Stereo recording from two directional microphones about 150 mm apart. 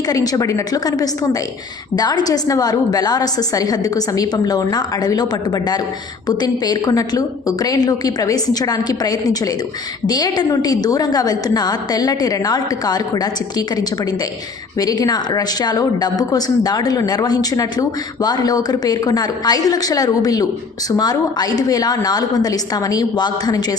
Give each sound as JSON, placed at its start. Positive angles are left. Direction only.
{"t": 0.1, "sound": "speech", "side_deg": 25}